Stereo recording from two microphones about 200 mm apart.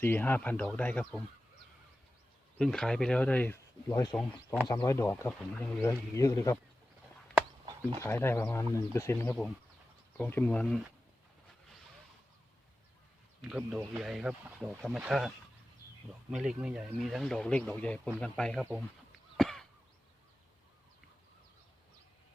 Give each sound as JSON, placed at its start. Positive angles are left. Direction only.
{"t": 0.0, "sound": "speech", "side_deg": 10}
{"t": 2.6, "sound": "speech", "side_deg": 5}
{"t": 5.4, "sound": "speech", "side_deg": 5}
{"t": 6.1, "sound": "speech", "side_deg": 15}
{"t": 7.9, "sound": "speech", "side_deg": 15}
{"t": 13.4, "sound": "speech", "side_deg": -5}
{"t": 16.3, "sound": "speech", "side_deg": -5}
{"t": 19.4, "sound": "a sound", "side_deg": 0}